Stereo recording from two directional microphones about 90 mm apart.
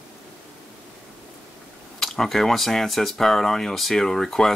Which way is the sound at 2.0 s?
5° left (ahead or behind).